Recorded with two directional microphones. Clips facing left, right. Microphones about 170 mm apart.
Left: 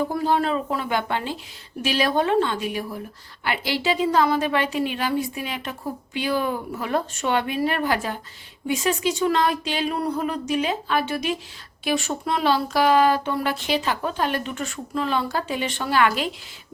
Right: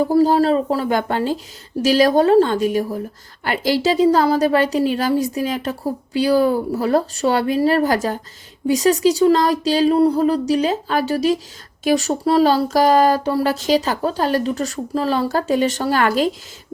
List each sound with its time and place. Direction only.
0.0 s a woman's voice: 40° right (ahead or behind)